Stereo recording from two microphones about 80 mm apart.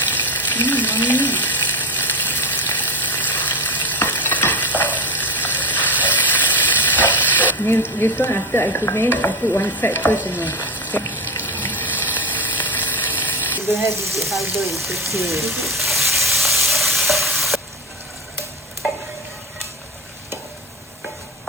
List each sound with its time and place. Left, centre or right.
0.0 s frying: left
3.8 s stir: left
10.2 s water: left
12.7 s a sound: left
13.7 s speech: right
14.2 s speech: centre
15.6 s stir: centre